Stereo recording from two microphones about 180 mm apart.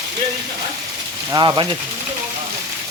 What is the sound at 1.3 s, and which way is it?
Speech, 25° right (ahead or behind).